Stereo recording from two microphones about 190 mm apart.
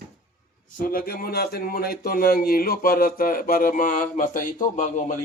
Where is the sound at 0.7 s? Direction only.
50° left (ahead or behind).